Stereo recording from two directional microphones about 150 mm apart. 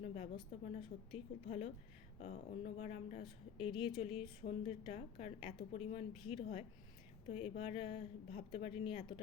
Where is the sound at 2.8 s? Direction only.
45° left (ahead or behind).